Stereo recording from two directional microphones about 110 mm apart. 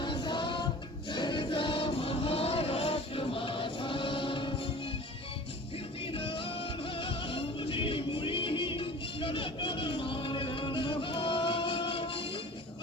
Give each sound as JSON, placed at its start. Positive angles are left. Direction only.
{"t": 0.0, "sound": "music", "side_deg": 45}
{"t": 6.1, "sound": "music", "side_deg": 55}